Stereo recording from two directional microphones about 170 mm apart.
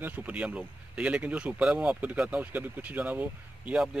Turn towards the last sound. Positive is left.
turn(degrees=-5)  # may be behind; listen again after turning